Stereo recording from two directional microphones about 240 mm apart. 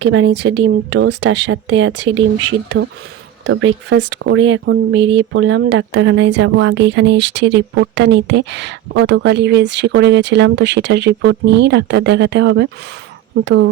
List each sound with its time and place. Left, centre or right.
0.0 s speech: right